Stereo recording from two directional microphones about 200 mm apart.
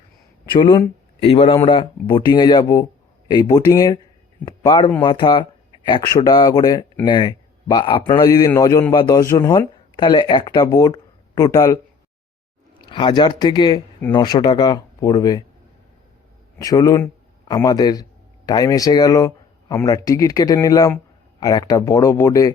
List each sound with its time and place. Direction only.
0.6 s a man's voice: 25° left (ahead or behind)
12.8 s a man's voice: 25° left (ahead or behind)
16.6 s a man's voice: 15° left (ahead or behind)